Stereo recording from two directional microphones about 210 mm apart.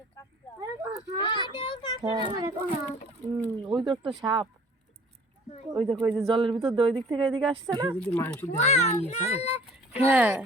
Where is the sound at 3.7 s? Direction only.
20° right (ahead or behind).